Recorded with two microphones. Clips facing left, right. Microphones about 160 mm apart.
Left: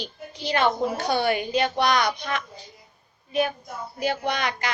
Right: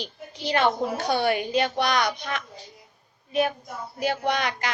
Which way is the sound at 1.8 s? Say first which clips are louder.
Left 4 dB; 45° left (ahead or behind).